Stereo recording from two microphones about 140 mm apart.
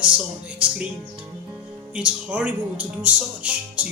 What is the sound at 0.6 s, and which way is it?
Speech, 10° right (ahead or behind).